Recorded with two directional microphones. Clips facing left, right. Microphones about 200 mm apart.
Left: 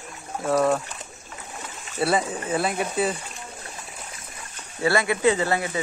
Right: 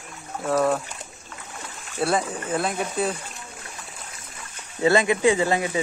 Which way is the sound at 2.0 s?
5° left (ahead or behind).